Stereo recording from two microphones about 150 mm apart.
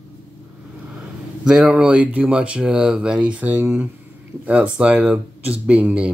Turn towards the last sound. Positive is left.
turn(degrees=-10)  # may be behind; listen again after turning